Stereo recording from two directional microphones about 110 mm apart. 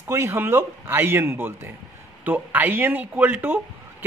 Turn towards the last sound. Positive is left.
turn(degrees=-15)  # may be behind; listen again after turning